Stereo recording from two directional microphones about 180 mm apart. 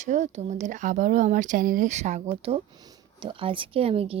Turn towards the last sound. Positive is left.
turn(degrees=-30)  # may be behind; listen again after turning